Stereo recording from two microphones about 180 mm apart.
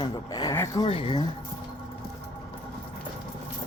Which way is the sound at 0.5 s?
15° left (ahead or behind).